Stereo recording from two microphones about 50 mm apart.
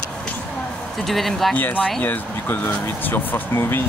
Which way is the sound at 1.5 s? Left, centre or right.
Left.